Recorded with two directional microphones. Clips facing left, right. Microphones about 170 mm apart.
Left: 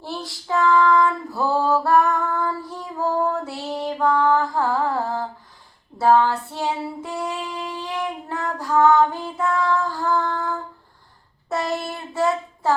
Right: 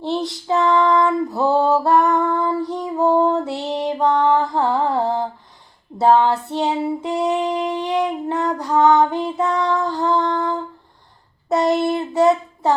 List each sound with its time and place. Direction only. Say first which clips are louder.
0.0 s female singing: right 9 dB; 20° right (ahead or behind)
11.4 s child singing: right 8 dB; 20° right (ahead or behind)